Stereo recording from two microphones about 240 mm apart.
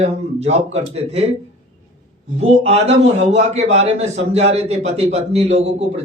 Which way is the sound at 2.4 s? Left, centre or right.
Right.